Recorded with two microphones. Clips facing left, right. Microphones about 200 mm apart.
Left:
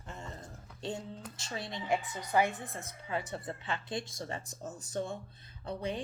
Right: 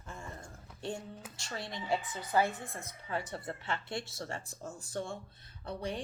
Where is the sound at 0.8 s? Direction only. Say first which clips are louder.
Left 1 dB; 20° left (ahead or behind).